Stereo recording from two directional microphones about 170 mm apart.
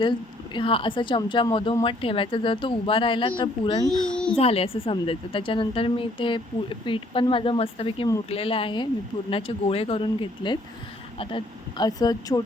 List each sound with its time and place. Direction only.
0.0 s a woman's voice: 30° left (ahead or behind)
3.8 s a child's voice: 5° left (ahead or behind)
4.4 s a woman's voice: 35° left (ahead or behind)